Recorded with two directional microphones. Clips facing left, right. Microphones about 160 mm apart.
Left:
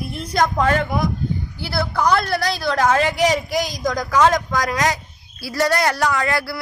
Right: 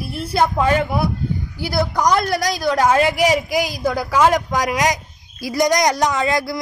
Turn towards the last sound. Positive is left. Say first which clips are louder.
# right 2 dB
turn(degrees=-15)  # may be behind; listen again after turning